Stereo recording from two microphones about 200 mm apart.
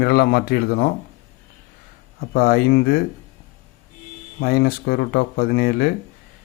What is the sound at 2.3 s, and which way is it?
Speech, 50° left (ahead or behind).